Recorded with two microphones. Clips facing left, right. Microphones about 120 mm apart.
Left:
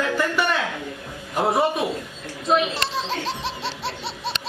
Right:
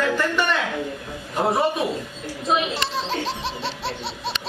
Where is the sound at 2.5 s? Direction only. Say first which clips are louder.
Left 2 dB; centre (ahead or behind).